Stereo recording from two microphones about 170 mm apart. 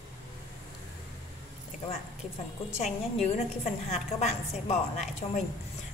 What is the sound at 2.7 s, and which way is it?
A woman's voice, 40° left (ahead or behind).